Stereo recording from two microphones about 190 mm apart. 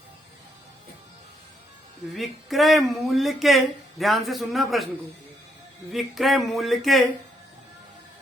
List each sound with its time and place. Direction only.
2.1 s speech: centre (ahead or behind)
5.9 s speech: centre (ahead or behind)